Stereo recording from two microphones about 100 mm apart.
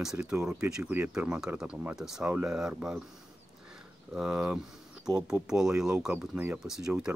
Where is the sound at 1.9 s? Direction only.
5° right (ahead or behind).